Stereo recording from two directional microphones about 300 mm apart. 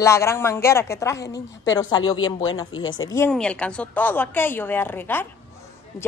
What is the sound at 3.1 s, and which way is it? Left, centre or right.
A woman's voice, centre.